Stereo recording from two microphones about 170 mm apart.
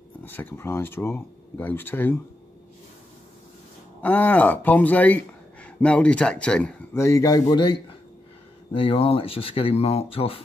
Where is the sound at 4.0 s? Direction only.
10° left (ahead or behind); by 10.4 s 35° left (ahead or behind).